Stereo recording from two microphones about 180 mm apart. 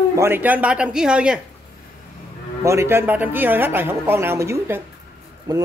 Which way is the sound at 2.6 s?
15° right (ahead or behind).